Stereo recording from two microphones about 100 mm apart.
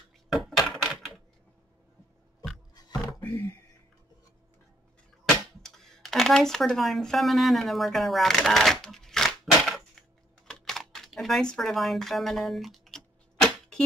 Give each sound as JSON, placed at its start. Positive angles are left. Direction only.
{"t": 0.5, "sound": "typewriter", "side_deg": 5}
{"t": 2.7, "sound": "roaring cats", "side_deg": 40}
{"t": 5.6, "sound": "speech", "side_deg": 5}
{"t": 10.4, "sound": "computer keyboard", "side_deg": 5}